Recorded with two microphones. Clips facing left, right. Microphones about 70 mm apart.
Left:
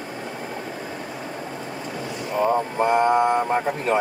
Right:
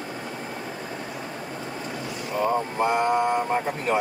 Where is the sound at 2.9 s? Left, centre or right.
Left.